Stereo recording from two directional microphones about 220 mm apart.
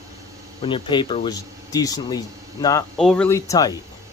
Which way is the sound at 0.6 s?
20° left (ahead or behind).